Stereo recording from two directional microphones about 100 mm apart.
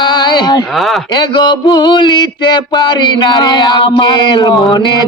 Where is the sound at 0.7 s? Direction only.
Centre (ahead or behind).